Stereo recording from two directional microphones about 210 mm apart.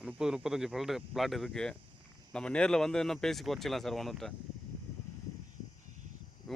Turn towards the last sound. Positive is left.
turn(degrees=0)  # may be behind; listen again after turning